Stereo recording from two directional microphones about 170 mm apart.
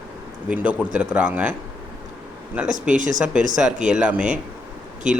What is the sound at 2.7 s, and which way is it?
Speech, 50° right (ahead or behind).